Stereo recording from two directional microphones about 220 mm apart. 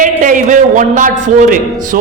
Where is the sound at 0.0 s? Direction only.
35° right (ahead or behind).